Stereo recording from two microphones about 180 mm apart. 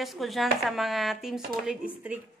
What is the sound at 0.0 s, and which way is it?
A woman's voice, centre (ahead or behind).